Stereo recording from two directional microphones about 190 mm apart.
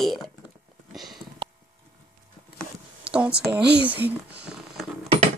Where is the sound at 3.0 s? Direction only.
5° right (ahead or behind).